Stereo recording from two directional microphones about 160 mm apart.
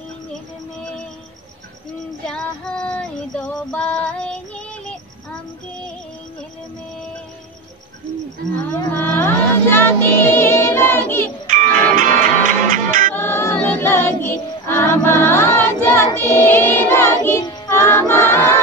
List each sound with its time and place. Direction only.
2.2 s female singing: 5° left (ahead or behind)
8.7 s music: 15° left (ahead or behind)
11.4 s music: 50° right (ahead or behind)
13.1 s music: 15° left (ahead or behind)